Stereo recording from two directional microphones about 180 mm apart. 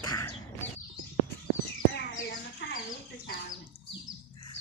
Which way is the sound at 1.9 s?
80° left.